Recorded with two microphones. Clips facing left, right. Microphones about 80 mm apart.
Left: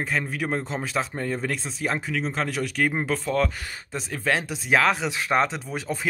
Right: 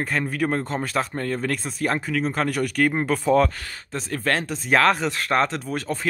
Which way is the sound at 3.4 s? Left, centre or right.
Centre.